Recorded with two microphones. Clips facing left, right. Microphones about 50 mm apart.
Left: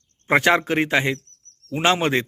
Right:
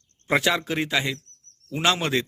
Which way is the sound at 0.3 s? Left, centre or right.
Left.